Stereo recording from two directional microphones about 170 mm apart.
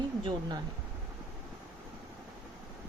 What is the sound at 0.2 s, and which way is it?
Speech, 25° right (ahead or behind).